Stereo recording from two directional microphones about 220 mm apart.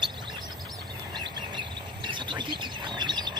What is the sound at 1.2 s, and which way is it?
Bird, 20° right (ahead or behind).